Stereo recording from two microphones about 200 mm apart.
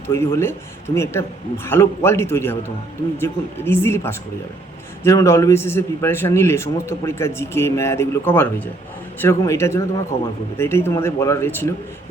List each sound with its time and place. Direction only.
0.1 s a man's voice: 10° left (ahead or behind)